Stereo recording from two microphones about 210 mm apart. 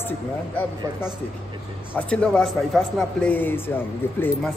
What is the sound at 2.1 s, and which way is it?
Speech, 5° left (ahead or behind).